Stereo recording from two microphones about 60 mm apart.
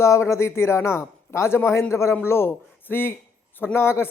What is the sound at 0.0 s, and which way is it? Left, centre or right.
Speech, left.